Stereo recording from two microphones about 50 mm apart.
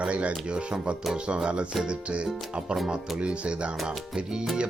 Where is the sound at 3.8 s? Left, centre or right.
Centre.